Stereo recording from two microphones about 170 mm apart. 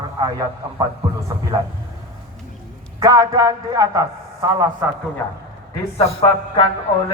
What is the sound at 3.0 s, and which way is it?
A man's voice, 20° right (ahead or behind).